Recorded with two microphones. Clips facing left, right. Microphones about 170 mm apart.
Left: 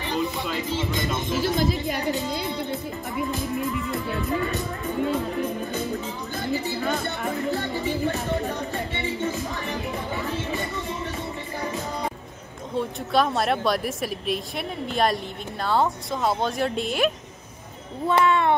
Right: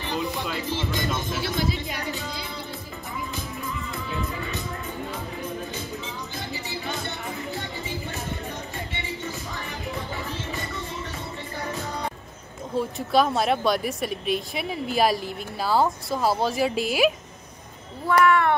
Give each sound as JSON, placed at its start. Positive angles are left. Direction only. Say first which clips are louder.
{"t": 0.1, "sound": "speech", "louder": "left 2 dB", "side_deg": 0}
{"t": 1.4, "sound": "speech", "louder": "left 7 dB", "side_deg": 45}
{"t": 6.5, "sound": "speech", "louder": "left 8 dB", "side_deg": 60}
{"t": 12.7, "sound": "speech", "louder": "right 1 dB", "side_deg": 0}
{"t": 18.0, "sound": "speech", "louder": "right 1 dB", "side_deg": 25}